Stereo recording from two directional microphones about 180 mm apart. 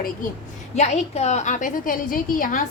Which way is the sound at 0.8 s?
40° left (ahead or behind).